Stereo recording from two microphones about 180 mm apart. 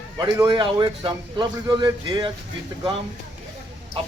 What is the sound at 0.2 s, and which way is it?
A man's voice, 20° right (ahead or behind).